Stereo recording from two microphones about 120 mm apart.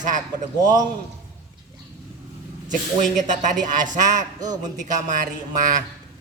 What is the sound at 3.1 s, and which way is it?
Speech, 90° right.